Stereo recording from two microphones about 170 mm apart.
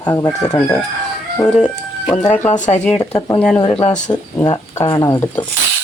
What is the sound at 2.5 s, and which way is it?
Speech, 45° left (ahead or behind).